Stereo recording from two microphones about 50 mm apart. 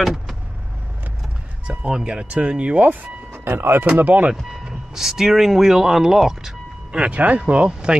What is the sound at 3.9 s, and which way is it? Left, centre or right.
Speech, right.